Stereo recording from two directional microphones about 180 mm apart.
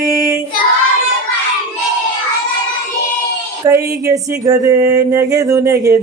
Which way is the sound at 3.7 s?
20° right (ahead or behind).